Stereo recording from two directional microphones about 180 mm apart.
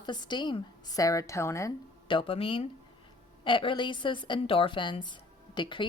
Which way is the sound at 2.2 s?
30° left (ahead or behind).